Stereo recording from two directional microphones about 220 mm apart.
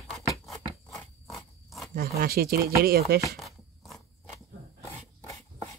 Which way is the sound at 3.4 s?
Centre (ahead or behind).